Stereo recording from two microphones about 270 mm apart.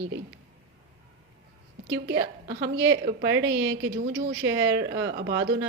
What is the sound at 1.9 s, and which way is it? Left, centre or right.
A woman's voice, right.